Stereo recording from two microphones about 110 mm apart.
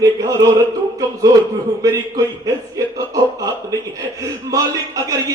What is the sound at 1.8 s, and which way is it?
Speech, 35° right (ahead or behind).